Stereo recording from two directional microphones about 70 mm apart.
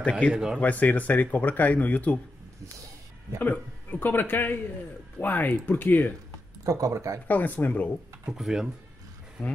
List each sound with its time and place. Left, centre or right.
0.0 s speech: centre
0.3 s speech: centre
0.6 s speech: left
3.3 s speech: left
6.6 s speech: right
7.2 s speech: left
8.3 s speech: centre
9.4 s speech: centre